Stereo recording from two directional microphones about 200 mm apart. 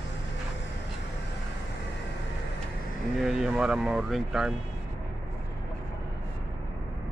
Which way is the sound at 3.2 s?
5° right (ahead or behind).